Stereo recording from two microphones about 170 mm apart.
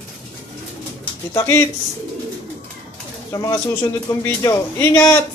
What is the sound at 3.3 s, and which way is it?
A man's voice, 15° left (ahead or behind).